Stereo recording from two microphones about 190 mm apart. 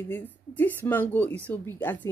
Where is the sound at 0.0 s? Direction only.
10° left (ahead or behind).